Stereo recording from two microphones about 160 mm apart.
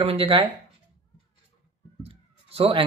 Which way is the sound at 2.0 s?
35° right (ahead or behind).